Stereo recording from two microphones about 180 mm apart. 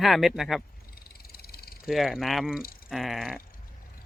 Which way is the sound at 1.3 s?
60° left (ahead or behind).